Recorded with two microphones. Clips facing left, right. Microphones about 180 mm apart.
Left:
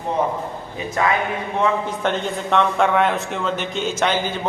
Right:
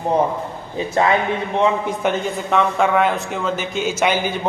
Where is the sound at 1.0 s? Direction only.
30° right (ahead or behind).